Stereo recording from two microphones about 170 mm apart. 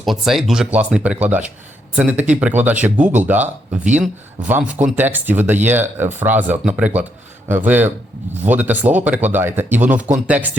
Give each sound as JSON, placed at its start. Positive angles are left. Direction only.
{"t": 0.0, "sound": "speech", "side_deg": 0}